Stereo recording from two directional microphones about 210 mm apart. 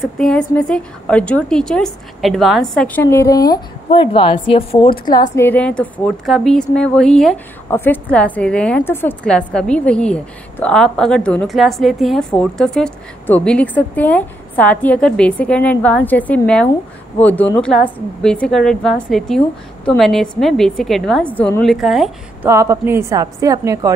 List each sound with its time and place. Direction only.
0.0 s a woman's voice: centre (ahead or behind)
22.5 s a woman's voice: 15° right (ahead or behind)